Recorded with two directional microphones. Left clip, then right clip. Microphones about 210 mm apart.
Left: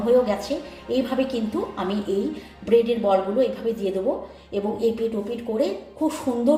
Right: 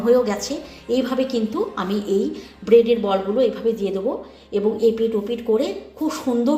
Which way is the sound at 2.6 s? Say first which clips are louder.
Right 4 dB; 20° right (ahead or behind).